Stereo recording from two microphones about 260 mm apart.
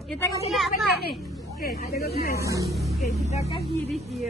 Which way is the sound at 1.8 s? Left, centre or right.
Left.